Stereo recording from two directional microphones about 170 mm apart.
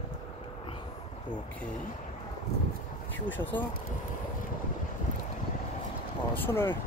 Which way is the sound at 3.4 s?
10° left (ahead or behind).